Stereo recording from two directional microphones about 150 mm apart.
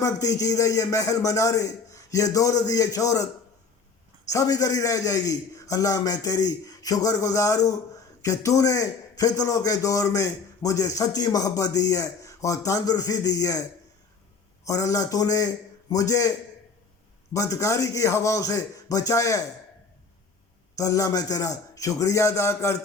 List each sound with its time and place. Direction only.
0.0 s a man's voice: 25° left (ahead or behind)
4.3 s a man's voice: 20° left (ahead or behind)
14.6 s a man's voice: 20° left (ahead or behind)
17.3 s a man's voice: 20° left (ahead or behind)
20.7 s a man's voice: 20° left (ahead or behind)